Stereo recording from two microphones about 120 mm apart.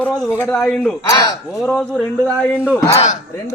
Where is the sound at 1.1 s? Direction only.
30° left (ahead or behind).